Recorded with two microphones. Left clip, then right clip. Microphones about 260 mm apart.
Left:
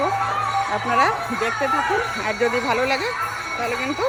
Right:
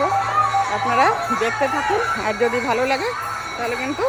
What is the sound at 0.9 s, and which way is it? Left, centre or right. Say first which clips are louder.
Speech: right 2 dB; centre.